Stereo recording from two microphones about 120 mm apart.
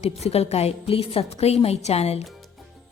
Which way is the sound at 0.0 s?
60° left (ahead or behind).